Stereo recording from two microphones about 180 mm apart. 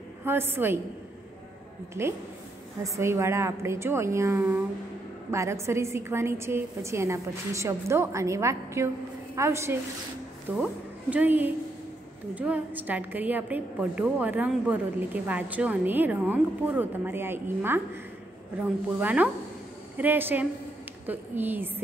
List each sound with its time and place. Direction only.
0.2 s a woman's voice: 10° right (ahead or behind)
2.0 s a woman's voice: 15° right (ahead or behind)
18.9 s a woman's voice: 10° right (ahead or behind)